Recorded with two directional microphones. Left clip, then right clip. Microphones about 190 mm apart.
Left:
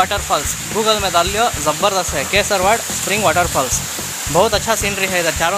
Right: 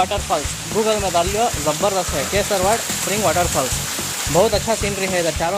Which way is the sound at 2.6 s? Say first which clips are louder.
Left 3 dB; 20° left (ahead or behind).